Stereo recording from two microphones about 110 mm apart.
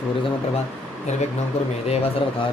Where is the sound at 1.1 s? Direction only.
90° left.